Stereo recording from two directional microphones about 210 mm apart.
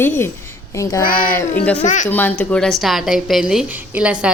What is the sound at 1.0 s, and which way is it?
A child's voice, 40° left (ahead or behind).